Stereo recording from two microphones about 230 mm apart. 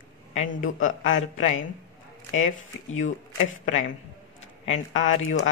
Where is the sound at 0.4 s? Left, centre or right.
Left.